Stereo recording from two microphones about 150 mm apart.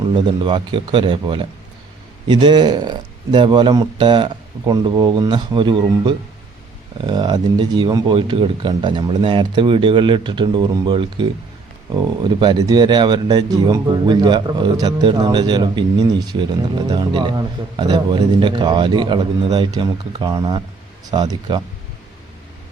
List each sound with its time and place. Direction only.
0.0 s a man's voice: 30° right (ahead or behind)